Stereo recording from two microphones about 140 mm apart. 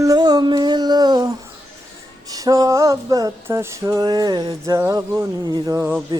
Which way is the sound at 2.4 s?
25° right (ahead or behind).